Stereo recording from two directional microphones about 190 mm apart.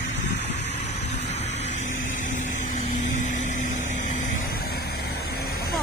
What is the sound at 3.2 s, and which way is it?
Vehicle, 40° left (ahead or behind).